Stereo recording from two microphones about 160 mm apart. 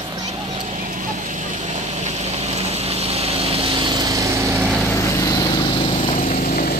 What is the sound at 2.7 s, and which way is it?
Vehicle, 40° right (ahead or behind).